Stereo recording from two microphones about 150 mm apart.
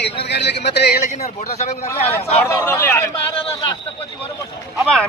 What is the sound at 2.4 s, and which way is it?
Speech, 15° left (ahead or behind).